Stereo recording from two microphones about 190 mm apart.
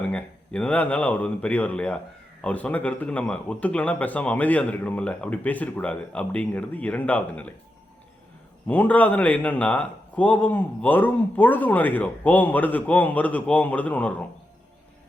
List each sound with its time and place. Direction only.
0.1 s a man's voice: 5° left (ahead or behind)
8.6 s a man's voice: 10° left (ahead or behind)